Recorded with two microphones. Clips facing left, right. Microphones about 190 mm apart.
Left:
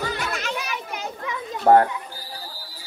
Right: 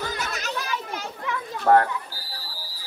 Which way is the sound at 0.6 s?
15° left (ahead or behind).